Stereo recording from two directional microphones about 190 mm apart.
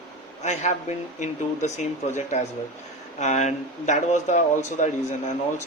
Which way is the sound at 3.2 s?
40° left (ahead or behind).